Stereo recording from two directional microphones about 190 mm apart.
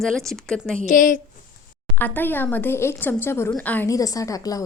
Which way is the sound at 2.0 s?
10° left (ahead or behind).